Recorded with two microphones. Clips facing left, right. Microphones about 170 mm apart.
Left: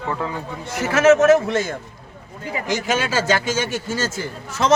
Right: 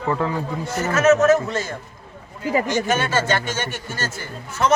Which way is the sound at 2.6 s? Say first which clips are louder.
Right 1 dB; 90° left.